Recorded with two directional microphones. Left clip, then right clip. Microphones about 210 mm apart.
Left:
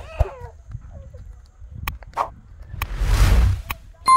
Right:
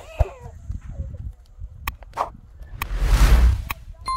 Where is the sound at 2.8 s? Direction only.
Centre (ahead or behind).